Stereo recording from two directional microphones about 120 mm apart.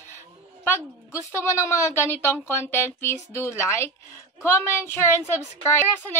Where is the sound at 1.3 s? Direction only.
25° left (ahead or behind).